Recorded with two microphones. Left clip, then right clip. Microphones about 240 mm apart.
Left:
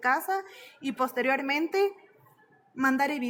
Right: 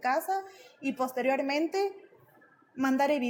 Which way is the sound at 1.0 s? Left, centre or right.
Left.